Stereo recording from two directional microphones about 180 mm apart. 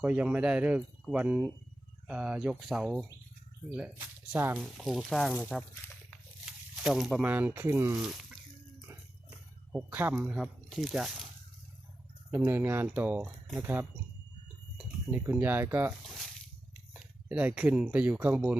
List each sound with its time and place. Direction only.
0.0 s speech: 5° right (ahead or behind)
9.7 s speech: 10° right (ahead or behind)
12.5 s speech: 10° right (ahead or behind)
16.0 s a sound: centre (ahead or behind)
16.9 s speech: 5° right (ahead or behind)